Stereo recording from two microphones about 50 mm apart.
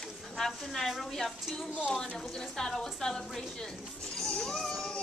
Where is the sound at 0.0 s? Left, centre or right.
Centre.